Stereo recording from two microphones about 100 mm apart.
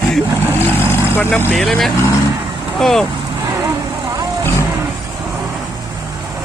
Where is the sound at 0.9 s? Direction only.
20° left (ahead or behind).